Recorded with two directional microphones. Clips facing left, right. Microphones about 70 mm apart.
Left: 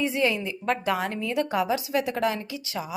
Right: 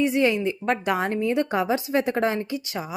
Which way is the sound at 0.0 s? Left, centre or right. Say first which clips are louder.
Right 4 dB; right.